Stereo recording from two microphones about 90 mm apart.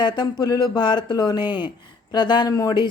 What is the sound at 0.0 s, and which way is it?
Speech, 50° left (ahead or behind).